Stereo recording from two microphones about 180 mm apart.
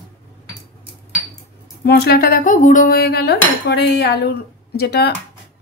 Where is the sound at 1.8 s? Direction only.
60° left (ahead or behind).